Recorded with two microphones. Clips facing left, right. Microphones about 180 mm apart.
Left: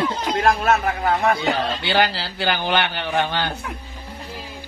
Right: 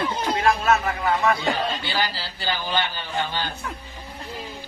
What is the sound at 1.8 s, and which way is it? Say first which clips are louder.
Speech: left 7 dB; 70° left (ahead or behind).